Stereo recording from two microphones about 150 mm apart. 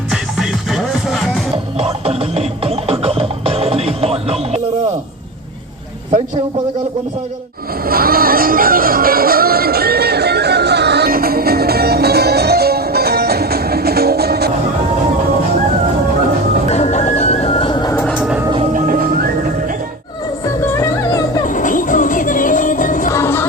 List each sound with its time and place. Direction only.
0.1 s music: centre (ahead or behind)
2.0 s music: 40° right (ahead or behind)
7.9 s music: 85° right
16.6 s music: 45° left (ahead or behind); by 18.0 s 30° left (ahead or behind)
18.2 s a sound: 5° right (ahead or behind)
18.6 s music: 65° right (ahead or behind)
20.4 s music: 20° left (ahead or behind)
21.4 s music: 60° left (ahead or behind)
23.1 s a sound: 15° left (ahead or behind)